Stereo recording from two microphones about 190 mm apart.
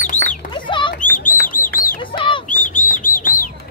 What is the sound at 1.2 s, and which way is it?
Bird, 45° left (ahead or behind).